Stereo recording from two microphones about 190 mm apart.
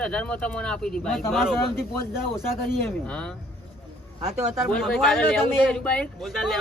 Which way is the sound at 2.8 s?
5° left (ahead or behind).